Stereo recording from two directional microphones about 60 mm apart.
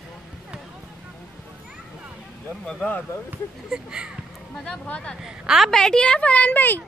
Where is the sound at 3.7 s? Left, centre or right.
Centre.